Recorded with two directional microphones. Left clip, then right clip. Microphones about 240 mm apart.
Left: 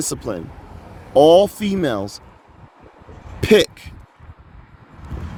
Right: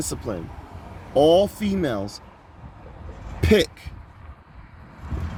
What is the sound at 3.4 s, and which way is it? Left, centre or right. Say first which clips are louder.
Speech: left 5 dB; left.